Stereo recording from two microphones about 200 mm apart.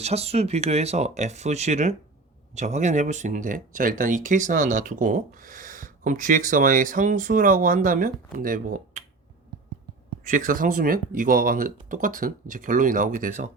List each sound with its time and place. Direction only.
0.0 s speech: 30° right (ahead or behind)
10.2 s speech: 40° right (ahead or behind)